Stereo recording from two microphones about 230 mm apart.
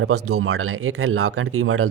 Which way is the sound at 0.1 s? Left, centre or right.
Right.